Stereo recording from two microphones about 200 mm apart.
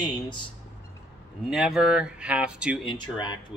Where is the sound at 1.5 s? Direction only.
5° right (ahead or behind).